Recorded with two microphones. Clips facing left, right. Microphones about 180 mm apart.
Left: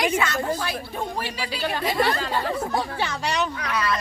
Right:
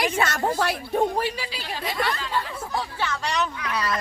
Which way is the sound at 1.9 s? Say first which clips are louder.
Left 3 dB; 30° left (ahead or behind).